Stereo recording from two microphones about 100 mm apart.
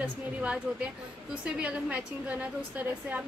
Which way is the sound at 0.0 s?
10° right (ahead or behind).